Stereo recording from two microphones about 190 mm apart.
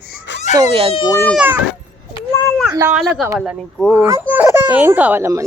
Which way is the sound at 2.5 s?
Centre (ahead or behind).